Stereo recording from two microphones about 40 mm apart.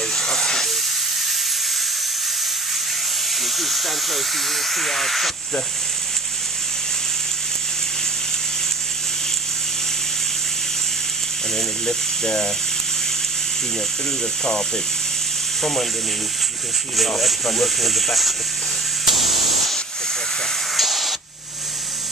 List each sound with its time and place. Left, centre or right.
0.1 s hiss: centre
3.4 s speech: centre
11.5 s speech: centre
15.6 s speech: centre
17.2 s speech: centre
19.0 s spray: centre
20.7 s spray: centre